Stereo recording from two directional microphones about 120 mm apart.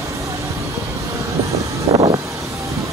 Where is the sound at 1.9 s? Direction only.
55° right (ahead or behind).